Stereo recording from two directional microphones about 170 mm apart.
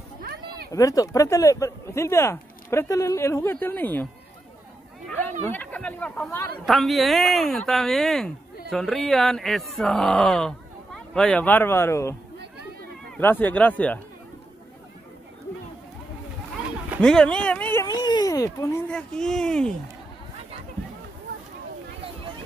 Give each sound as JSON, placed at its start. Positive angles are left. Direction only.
{"t": 0.2, "sound": "a sound", "side_deg": -60}
{"t": 0.7, "sound": "speech", "side_deg": 20}
{"t": 6.6, "sound": "speech", "side_deg": 0}
{"t": 13.2, "sound": "speech", "side_deg": 10}
{"t": 17.0, "sound": "speech", "side_deg": 5}
{"t": 18.0, "sound": "speech", "side_deg": 25}